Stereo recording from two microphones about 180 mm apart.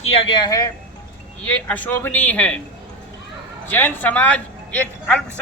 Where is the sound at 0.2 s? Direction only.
25° left (ahead or behind).